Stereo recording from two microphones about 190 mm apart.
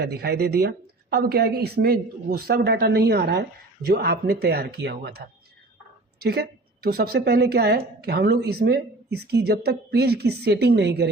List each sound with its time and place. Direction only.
0.0 s a woman's voice: 60° right (ahead or behind)